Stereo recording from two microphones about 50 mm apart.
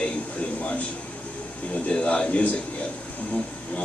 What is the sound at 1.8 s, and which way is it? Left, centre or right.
Speech, left.